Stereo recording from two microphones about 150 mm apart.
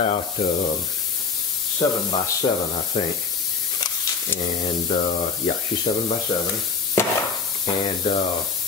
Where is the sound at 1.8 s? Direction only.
30° left (ahead or behind).